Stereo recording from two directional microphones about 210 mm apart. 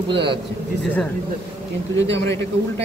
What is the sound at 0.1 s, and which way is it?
Speech, 55° right (ahead or behind).